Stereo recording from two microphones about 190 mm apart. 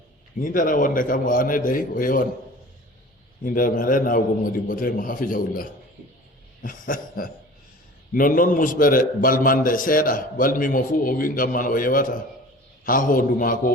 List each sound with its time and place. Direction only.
0.3 s a man's voice: 45° left (ahead or behind)
3.4 s a man's voice: 45° left (ahead or behind)